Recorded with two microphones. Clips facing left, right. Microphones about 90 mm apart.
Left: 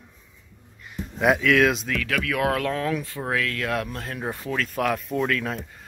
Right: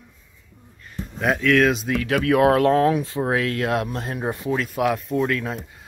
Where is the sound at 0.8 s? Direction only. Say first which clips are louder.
Left 2 dB; 10° left (ahead or behind).